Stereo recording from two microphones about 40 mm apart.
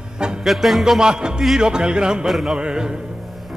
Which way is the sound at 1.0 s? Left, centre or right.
Centre.